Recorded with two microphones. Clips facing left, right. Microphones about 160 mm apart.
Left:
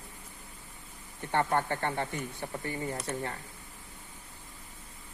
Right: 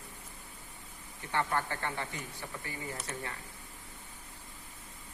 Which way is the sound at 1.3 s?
50° left (ahead or behind).